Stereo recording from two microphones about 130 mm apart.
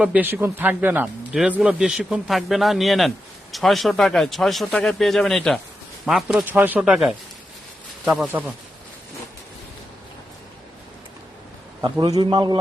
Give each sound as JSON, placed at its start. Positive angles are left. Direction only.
{"t": 0.0, "sound": "a man's voice", "side_deg": -10}
{"t": 6.5, "sound": "a man's voice", "side_deg": -15}
{"t": 8.3, "sound": "a man's voice", "side_deg": -15}
{"t": 11.8, "sound": "a man's voice", "side_deg": -30}